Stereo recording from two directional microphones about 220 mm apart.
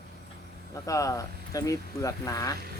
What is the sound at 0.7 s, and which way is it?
Speech, 15° left (ahead or behind).